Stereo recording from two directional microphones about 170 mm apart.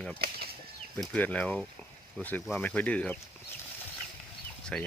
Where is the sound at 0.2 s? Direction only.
65° right (ahead or behind).